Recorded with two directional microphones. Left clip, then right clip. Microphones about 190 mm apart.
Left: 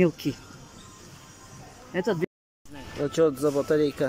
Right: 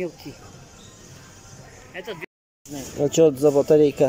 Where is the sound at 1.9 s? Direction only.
65° left (ahead or behind).